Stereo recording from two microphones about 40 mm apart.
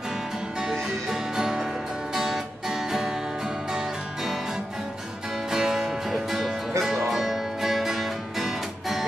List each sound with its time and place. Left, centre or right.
0.6 s music: centre
5.5 s music: centre